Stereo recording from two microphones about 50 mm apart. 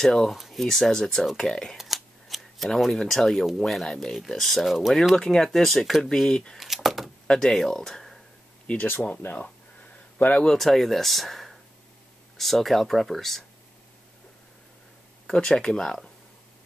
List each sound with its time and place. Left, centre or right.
0.0 s speech: centre
1.8 s scissors: centre
3.5 s speech: centre
5.1 s speech: centre
6.6 s speech: centre
7.2 s speech: centre
9.1 s speech: left
10.4 s speech: centre
15.3 s speech: centre